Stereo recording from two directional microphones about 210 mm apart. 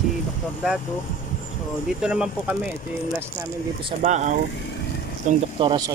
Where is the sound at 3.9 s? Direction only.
35° right (ahead or behind).